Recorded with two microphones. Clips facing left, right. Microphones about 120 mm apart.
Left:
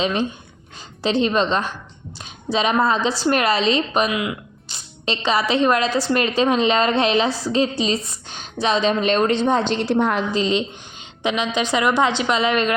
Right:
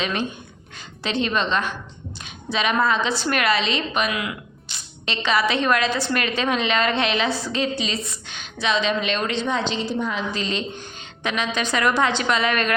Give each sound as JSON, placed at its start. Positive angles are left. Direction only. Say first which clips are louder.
{"t": 0.0, "sound": "a woman's voice", "louder": "left 4 dB", "side_deg": 30}
{"t": 4.1, "sound": "a woman's voice", "louder": "left 4 dB", "side_deg": 20}
{"t": 4.7, "sound": "a woman's voice", "louder": "left 4 dB", "side_deg": 35}
{"t": 9.8, "sound": "a woman's voice", "louder": "left 6 dB", "side_deg": 75}
{"t": 10.3, "sound": "a woman's voice", "louder": "left 6 dB", "side_deg": 20}